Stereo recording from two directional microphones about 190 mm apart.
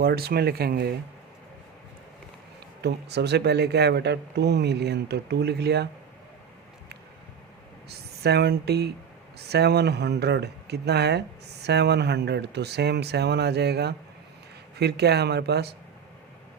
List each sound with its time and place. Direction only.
0.0 s speech: 55° right (ahead or behind)
2.8 s speech: 60° right (ahead or behind)
7.9 s speech: 60° right (ahead or behind)